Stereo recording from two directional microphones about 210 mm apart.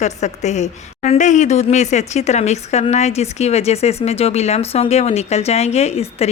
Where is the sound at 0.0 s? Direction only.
35° left (ahead or behind).